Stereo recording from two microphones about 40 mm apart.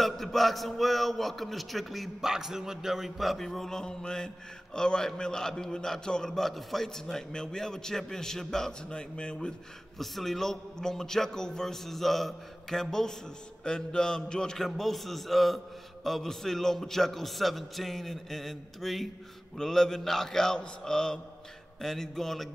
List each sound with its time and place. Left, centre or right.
0.0 s a man's voice: centre
2.2 s a man's voice: centre
3.4 s a man's voice: centre
8.8 s a man's voice: left
9.9 s a man's voice: centre
13.7 s a man's voice: left